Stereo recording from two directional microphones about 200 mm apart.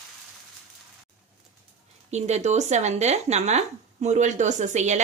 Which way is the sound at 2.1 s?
35° right (ahead or behind).